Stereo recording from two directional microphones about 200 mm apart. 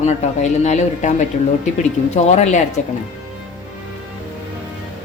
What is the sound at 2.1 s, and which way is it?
Speech, 35° left (ahead or behind).